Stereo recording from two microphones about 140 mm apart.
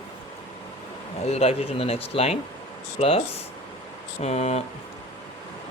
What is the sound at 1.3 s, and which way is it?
Speech, 45° left (ahead or behind).